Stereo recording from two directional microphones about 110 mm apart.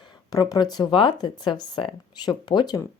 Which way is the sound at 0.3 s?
35° left (ahead or behind).